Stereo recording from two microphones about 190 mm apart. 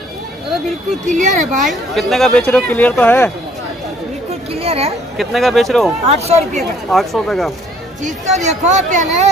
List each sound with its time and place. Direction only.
1.0 s speech: 40° right (ahead or behind)
1.6 s speech: centre (ahead or behind)
4.5 s a sound: 30° right (ahead or behind)
5.1 s speech: centre (ahead or behind)
6.0 s speech: 35° right (ahead or behind)
6.9 s speech: centre (ahead or behind)
8.0 s speech: 40° right (ahead or behind)